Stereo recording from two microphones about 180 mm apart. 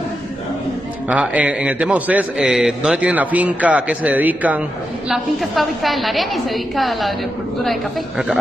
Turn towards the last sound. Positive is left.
turn(degrees=0)  # may be behind; listen again after turning